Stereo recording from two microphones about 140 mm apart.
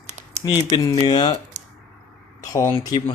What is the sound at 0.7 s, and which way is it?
Speech, 30° left (ahead or behind).